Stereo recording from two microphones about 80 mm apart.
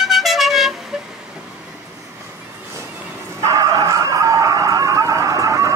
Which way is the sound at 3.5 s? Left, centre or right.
Right.